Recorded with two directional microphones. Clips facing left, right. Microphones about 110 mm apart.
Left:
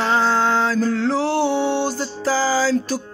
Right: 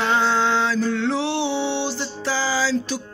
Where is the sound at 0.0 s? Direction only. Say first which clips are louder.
Left 2 dB; 35° left (ahead or behind).